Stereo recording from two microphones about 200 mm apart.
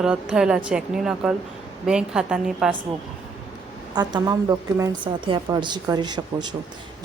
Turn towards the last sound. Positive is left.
turn(degrees=-20)  # may be behind; listen again after turning